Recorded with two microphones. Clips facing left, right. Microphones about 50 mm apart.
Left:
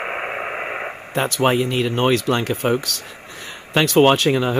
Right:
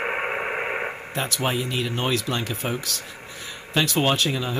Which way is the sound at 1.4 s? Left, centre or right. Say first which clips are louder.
Left 9 dB; left.